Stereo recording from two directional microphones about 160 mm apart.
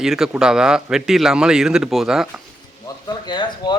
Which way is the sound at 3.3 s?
30° left (ahead or behind).